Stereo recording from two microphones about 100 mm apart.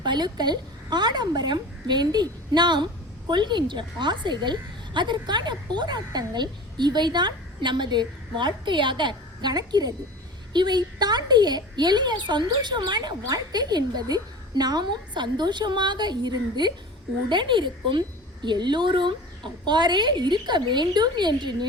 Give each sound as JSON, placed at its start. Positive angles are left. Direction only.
{"t": 0.0, "sound": "a woman's voice", "side_deg": -50}